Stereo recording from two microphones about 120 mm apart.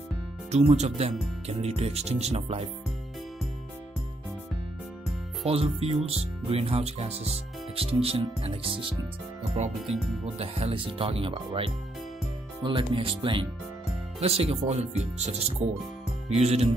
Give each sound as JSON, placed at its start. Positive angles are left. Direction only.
{"t": 0.5, "sound": "speech", "side_deg": -65}
{"t": 5.4, "sound": "speech", "side_deg": -55}
{"t": 9.4, "sound": "speech", "side_deg": -70}
{"t": 9.8, "sound": "speech", "side_deg": 0}
{"t": 10.4, "sound": "speech", "side_deg": -50}
{"t": 14.2, "sound": "speech", "side_deg": -55}